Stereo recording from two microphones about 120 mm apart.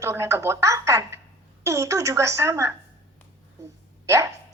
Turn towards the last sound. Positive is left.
turn(degrees=-25)  # may be behind; listen again after turning